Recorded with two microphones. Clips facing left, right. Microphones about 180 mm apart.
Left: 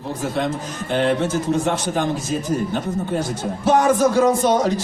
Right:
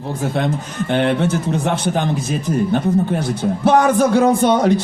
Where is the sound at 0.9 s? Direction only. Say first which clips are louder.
Right 1 dB; 60° right (ahead or behind).